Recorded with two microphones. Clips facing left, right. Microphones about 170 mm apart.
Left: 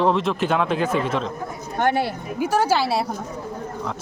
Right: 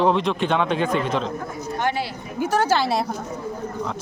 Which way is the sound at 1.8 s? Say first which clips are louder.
Left 4 dB; 55° left (ahead or behind).